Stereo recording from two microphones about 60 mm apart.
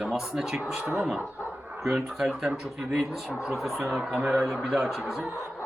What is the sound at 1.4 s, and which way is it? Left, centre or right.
Bow-wow, right.